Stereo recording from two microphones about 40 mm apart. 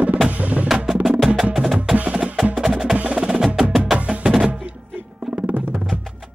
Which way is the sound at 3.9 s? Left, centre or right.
Right.